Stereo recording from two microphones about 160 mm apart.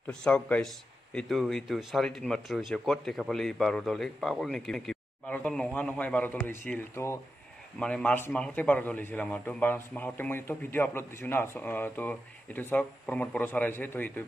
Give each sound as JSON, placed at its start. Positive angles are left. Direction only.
{"t": 0.0, "sound": "a man's voice", "side_deg": 5}